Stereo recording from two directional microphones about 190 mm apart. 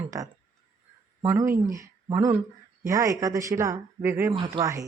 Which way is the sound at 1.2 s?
10° right (ahead or behind).